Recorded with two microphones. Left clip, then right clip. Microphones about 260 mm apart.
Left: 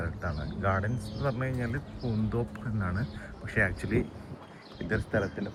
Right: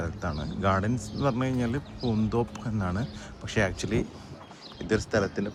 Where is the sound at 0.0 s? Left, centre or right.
Centre.